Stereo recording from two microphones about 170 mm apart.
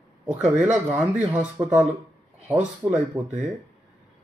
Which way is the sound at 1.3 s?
10° right (ahead or behind).